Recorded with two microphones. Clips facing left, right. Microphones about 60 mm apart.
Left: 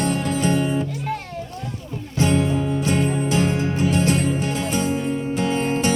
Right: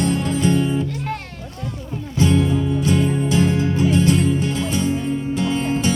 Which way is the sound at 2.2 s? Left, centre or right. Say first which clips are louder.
Right 2 dB; left.